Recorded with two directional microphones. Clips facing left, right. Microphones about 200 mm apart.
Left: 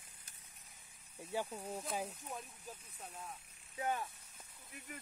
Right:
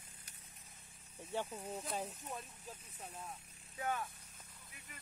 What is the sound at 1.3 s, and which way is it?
Speech, 5° left (ahead or behind).